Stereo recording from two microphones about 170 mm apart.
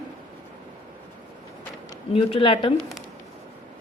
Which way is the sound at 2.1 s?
30° left (ahead or behind).